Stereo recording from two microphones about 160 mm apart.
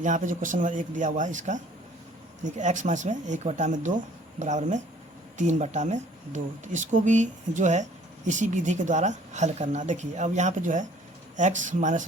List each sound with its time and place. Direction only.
0.0 s speech: 55° right (ahead or behind)